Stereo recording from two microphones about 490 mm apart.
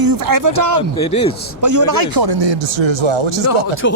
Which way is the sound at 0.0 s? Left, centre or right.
Right.